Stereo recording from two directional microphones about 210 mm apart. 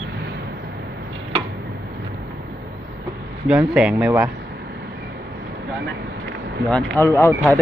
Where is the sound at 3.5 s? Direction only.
5° right (ahead or behind).